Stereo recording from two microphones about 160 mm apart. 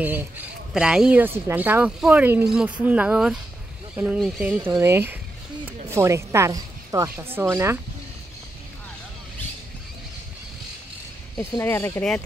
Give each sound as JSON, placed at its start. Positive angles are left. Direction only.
{"t": 0.0, "sound": "a woman's voice", "side_deg": -10}
{"t": 11.3, "sound": "speech", "side_deg": 20}